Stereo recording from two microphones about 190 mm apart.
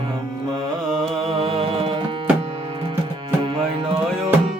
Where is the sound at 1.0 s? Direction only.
30° right (ahead or behind).